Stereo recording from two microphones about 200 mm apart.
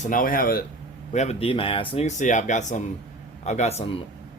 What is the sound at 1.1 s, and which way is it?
Speech, 30° left (ahead or behind).